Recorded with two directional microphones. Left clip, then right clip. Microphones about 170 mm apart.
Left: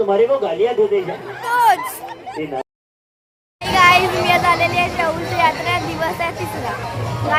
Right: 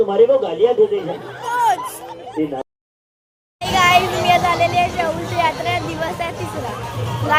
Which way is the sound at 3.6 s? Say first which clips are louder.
Left 2 dB; 10° left (ahead or behind).